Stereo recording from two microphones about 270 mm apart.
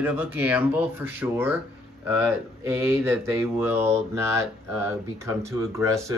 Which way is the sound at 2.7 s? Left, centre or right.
Centre.